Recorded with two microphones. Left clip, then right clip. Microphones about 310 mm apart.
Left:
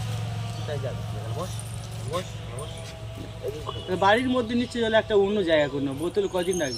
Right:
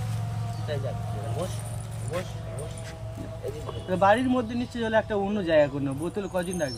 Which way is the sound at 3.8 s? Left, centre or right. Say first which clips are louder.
Even; centre.